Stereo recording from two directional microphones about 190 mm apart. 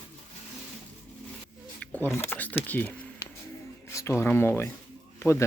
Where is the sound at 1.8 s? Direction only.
5° left (ahead or behind).